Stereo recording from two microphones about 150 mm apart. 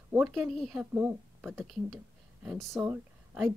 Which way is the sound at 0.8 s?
15° right (ahead or behind).